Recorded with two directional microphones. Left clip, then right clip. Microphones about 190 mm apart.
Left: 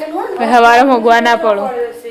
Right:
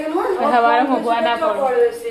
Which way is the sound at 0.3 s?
35° left (ahead or behind).